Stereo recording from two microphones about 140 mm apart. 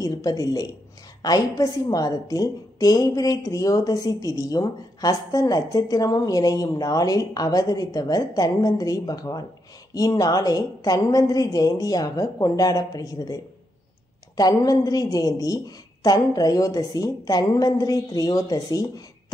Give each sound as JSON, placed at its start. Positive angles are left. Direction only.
{"t": 0.0, "sound": "a woman's voice", "side_deg": 25}